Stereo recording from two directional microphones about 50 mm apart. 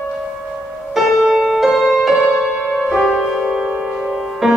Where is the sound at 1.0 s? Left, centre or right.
Centre.